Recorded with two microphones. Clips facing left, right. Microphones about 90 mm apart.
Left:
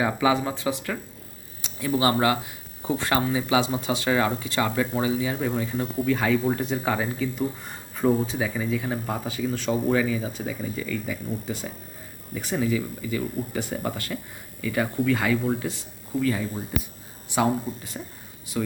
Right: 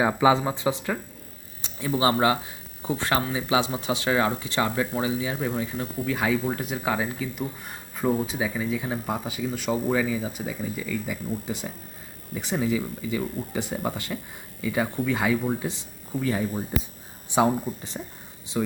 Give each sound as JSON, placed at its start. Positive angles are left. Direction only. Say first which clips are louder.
{"t": 0.0, "sound": "speech", "louder": "right 2 dB", "side_deg": -25}
{"t": 3.2, "sound": "speech", "louder": "left 3 dB", "side_deg": -10}
{"t": 4.4, "sound": "speech", "louder": "left 1 dB", "side_deg": -20}
{"t": 11.1, "sound": "speech", "louder": "even", "side_deg": -15}
{"t": 18.5, "sound": "speech", "louder": "right 1 dB", "side_deg": -10}